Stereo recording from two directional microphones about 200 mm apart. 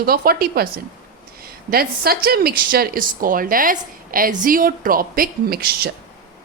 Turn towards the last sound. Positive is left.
turn(degrees=-50)  # may be behind; listen again after turning